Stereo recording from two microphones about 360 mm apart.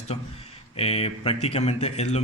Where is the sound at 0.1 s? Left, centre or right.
Centre.